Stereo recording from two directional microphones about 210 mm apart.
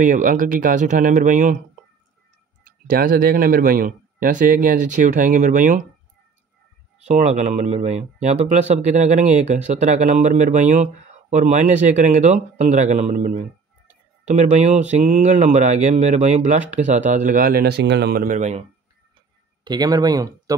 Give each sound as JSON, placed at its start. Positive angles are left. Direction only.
{"t": 0.0, "sound": "speech", "side_deg": -40}
{"t": 2.6, "sound": "speech", "side_deg": -40}
{"t": 7.1, "sound": "speech", "side_deg": -30}
{"t": 19.6, "sound": "speech", "side_deg": -20}